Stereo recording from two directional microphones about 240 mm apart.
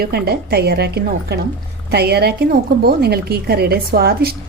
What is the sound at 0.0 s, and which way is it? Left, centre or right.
A woman's voice, right.